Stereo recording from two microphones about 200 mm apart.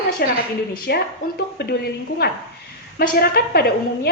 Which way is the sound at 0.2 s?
50° left (ahead or behind).